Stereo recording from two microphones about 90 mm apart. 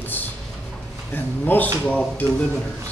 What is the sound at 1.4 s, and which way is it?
Speech, 20° left (ahead or behind).